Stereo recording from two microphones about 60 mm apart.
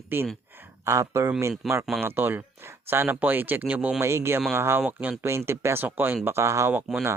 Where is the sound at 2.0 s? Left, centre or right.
Right.